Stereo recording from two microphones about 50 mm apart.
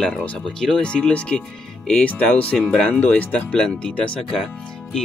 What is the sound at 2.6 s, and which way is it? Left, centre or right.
Speech, centre.